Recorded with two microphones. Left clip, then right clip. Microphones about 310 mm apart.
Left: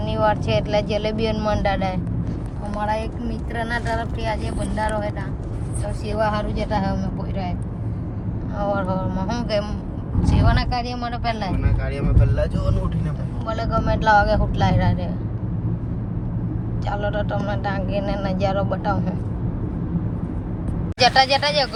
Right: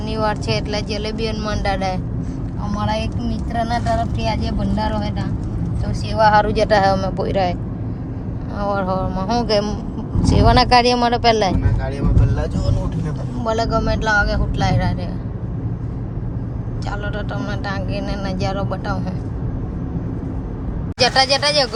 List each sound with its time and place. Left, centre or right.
0.1 s speech: centre
6.1 s speech: right
8.5 s speech: centre; by 11.5 s right
13.4 s speech: centre
17.0 s speech: centre
21.0 s speech: centre